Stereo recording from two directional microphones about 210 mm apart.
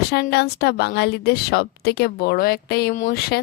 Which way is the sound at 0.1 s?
50° left (ahead or behind).